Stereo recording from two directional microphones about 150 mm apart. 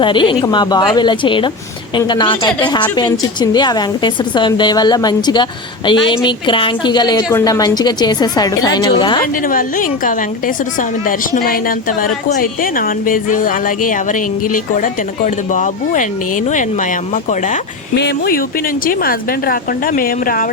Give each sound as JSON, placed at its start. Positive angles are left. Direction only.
{"t": 0.0, "sound": "a woman's voice", "side_deg": 35}
{"t": 9.5, "sound": "a woman's voice", "side_deg": 65}
{"t": 17.2, "sound": "a woman's voice", "side_deg": 55}
{"t": 18.0, "sound": "a woman's voice", "side_deg": 80}